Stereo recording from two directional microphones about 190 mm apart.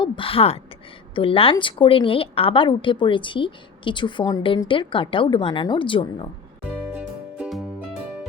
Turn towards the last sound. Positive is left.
turn(degrees=-5)  # may be behind; listen again after turning